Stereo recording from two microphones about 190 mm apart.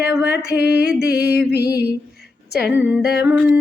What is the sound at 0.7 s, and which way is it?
Music, 5° right (ahead or behind).